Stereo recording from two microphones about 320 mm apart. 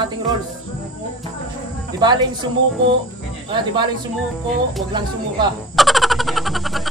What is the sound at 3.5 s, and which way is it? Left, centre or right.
Speech, centre.